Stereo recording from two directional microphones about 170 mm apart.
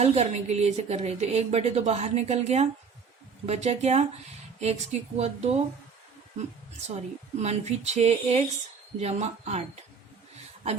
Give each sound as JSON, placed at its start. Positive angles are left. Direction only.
{"t": 0.0, "sound": "a woman's voice", "side_deg": -40}
{"t": 7.4, "sound": "a woman's voice", "side_deg": -40}